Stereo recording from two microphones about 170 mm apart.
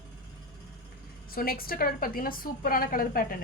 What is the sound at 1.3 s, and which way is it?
A woman's voice, 60° left (ahead or behind).